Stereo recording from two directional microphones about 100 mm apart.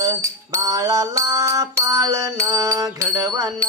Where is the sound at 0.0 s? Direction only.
35° right (ahead or behind).